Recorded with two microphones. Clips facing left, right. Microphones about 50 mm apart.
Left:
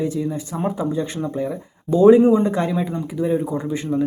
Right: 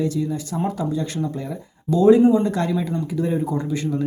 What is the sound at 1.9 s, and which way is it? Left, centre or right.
Speech, left.